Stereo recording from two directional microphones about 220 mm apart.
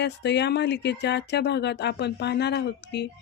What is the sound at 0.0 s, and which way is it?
Speech, 50° left (ahead or behind).